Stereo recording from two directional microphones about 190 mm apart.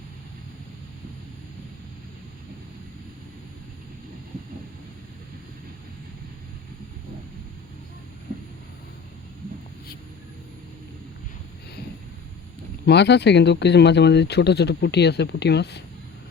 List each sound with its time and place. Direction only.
12.8 s speech: 65° left (ahead or behind)